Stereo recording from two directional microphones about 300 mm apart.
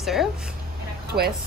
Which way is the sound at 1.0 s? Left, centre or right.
Right.